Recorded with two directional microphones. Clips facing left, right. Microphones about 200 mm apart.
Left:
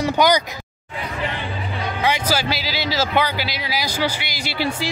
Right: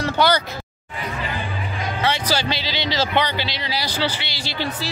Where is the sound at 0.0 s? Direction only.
15° left (ahead or behind).